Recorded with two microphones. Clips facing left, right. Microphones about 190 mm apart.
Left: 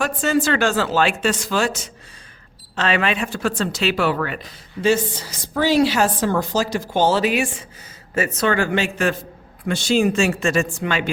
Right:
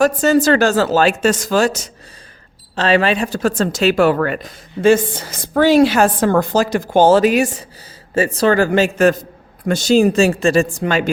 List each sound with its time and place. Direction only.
0.0 s speech: 40° right (ahead or behind)